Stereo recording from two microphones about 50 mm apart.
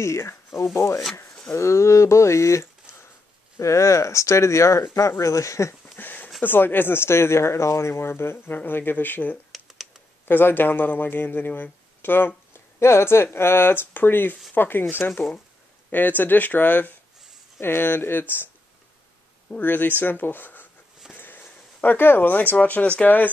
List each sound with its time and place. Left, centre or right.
0.0 s speech: left
3.5 s speech: left
5.9 s a sound: left
6.4 s speech: left
9.5 s computer keyboard: centre
10.2 s speech: left
12.5 s speech: left
17.6 s speech: left
19.5 s speech: left
21.1 s a sound: left
23.0 s speech: left